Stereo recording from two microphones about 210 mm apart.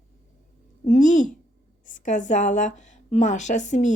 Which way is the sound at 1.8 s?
35° left (ahead or behind).